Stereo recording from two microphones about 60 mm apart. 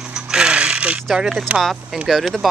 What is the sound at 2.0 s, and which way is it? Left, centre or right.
Speech, centre.